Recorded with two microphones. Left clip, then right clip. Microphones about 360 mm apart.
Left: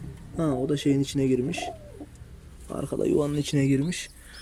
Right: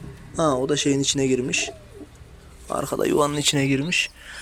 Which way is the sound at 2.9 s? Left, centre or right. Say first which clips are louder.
Right 4 dB; right.